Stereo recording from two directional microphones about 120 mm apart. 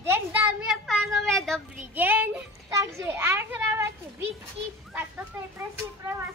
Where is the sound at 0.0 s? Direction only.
20° right (ahead or behind).